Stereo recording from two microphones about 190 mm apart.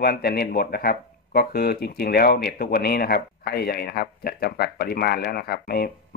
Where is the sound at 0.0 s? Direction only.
55° left (ahead or behind).